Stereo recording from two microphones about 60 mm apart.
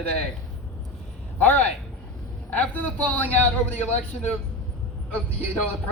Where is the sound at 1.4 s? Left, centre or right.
Left.